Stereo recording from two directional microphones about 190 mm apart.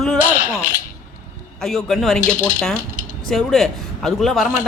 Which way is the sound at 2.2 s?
40° left (ahead or behind).